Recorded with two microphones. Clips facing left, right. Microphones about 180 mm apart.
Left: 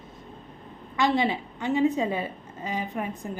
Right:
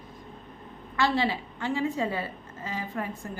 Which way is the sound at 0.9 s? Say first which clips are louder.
Left 2 dB; 20° left (ahead or behind).